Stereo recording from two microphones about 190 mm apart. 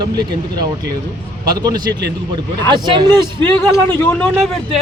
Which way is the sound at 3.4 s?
10° left (ahead or behind).